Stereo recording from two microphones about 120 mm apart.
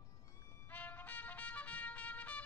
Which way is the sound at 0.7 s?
15° left (ahead or behind).